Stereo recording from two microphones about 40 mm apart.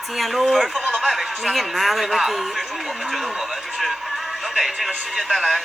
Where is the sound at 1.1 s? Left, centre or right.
Centre.